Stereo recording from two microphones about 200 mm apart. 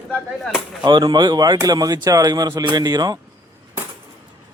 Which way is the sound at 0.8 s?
20° right (ahead or behind).